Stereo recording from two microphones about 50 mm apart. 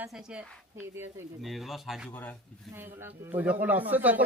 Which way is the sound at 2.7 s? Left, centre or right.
Right.